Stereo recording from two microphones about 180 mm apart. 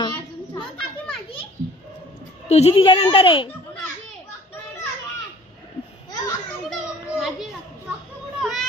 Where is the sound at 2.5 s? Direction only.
35° left (ahead or behind).